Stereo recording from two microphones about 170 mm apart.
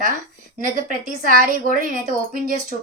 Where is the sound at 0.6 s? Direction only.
50° right (ahead or behind).